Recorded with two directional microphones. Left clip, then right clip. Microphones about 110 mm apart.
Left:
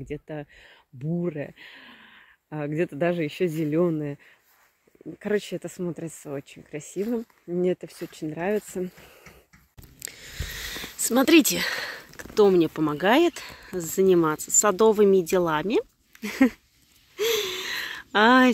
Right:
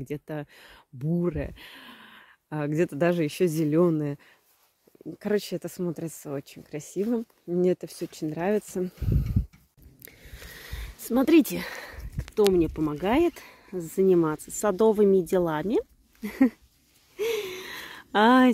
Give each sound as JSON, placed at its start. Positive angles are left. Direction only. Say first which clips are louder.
{"t": 0.1, "sound": "speech", "louder": "even", "side_deg": -45}
{"t": 5.2, "sound": "speech", "louder": "left 1 dB", "side_deg": -20}
{"t": 9.9, "sound": "speech", "louder": "left 9 dB", "side_deg": 0}
{"t": 17.2, "sound": "gasp", "louder": "left 4 dB", "side_deg": -10}